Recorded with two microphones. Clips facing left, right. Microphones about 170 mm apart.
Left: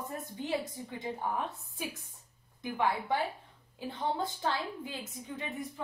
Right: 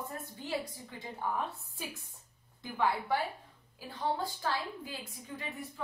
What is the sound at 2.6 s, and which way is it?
A woman's voice, 15° left (ahead or behind).